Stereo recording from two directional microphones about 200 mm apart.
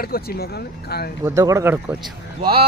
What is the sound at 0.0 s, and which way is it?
Speech, 50° left (ahead or behind).